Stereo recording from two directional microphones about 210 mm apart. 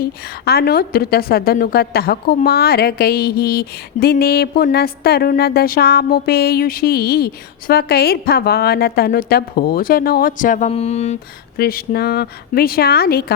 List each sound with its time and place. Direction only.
0.0 s a woman's voice: 50° left (ahead or behind); by 11.2 s 30° left (ahead or behind)
11.5 s a woman's voice: 45° left (ahead or behind)